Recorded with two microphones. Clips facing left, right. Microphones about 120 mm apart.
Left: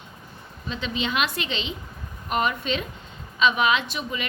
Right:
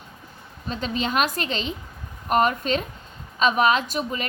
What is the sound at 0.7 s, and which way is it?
A woman's voice, 45° right (ahead or behind).